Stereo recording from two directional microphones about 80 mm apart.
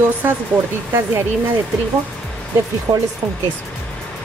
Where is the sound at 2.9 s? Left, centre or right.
Right.